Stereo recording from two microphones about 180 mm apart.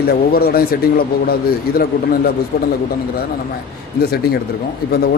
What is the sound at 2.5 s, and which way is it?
Speech, 60° left (ahead or behind).